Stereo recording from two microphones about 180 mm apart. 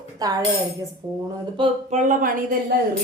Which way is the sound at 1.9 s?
50° right (ahead or behind).